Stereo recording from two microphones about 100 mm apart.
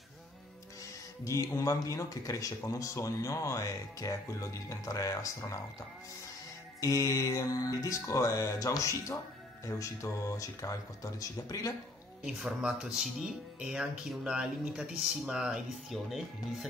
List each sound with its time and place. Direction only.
1.2 s speech: 30° left (ahead or behind)
6.8 s speech: 35° left (ahead or behind)
12.3 s speech: 5° right (ahead or behind)